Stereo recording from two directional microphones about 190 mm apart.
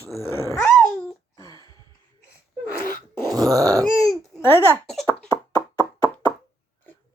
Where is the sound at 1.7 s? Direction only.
20° right (ahead or behind).